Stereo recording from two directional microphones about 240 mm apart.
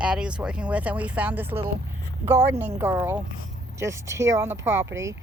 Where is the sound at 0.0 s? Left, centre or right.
Centre.